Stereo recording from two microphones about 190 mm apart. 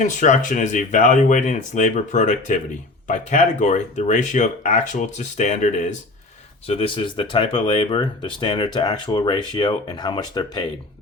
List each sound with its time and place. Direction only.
0.0 s speech: 40° left (ahead or behind)
6.7 s speech: 30° left (ahead or behind)